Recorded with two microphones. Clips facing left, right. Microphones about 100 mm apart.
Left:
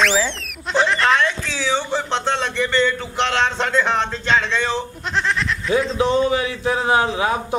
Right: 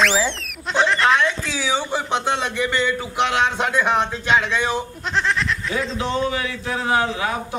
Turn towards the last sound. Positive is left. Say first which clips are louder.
# left 3 dB
turn(degrees=25)  # may be behind; listen again after turning